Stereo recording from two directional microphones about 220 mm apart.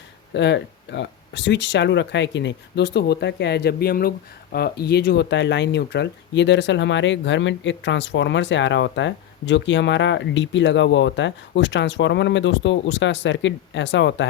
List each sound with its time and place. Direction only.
0.3 s speech: 50° left (ahead or behind)